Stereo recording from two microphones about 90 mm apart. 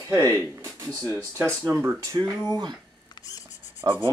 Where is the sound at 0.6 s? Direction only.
35° right (ahead or behind).